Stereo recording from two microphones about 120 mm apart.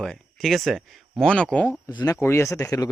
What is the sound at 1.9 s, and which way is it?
Speech, 35° left (ahead or behind).